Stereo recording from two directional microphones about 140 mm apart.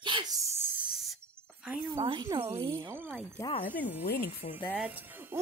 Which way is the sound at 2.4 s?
20° right (ahead or behind).